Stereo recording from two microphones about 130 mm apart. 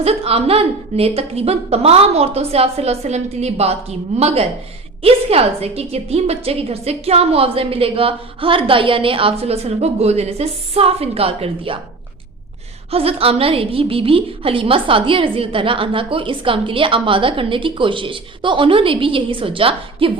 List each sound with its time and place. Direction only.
0.0 s a woman's voice: 50° right (ahead or behind)
12.9 s a woman's voice: 50° right (ahead or behind)